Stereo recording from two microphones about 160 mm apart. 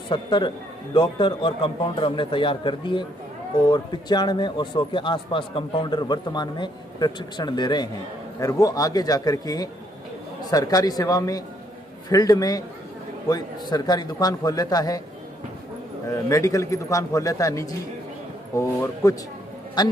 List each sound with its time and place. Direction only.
0.1 s a man's voice: 30° left (ahead or behind)
16.1 s a man's voice: 20° left (ahead or behind)